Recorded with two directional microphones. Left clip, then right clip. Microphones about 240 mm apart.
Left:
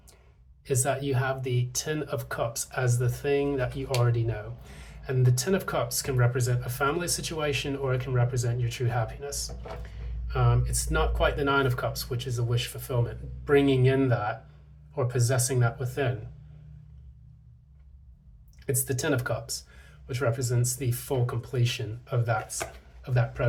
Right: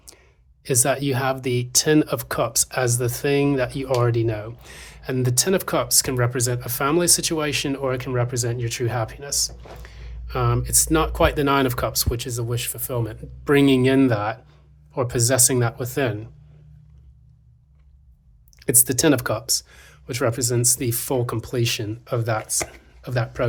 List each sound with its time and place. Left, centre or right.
0.6 s speech: right
18.6 s speech: right